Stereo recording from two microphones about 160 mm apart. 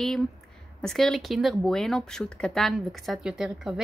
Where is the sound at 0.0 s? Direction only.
Centre (ahead or behind).